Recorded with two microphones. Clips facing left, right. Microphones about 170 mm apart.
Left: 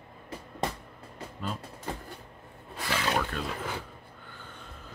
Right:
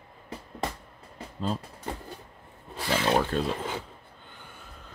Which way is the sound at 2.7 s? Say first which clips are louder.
Right 5 dB; 30° right (ahead or behind).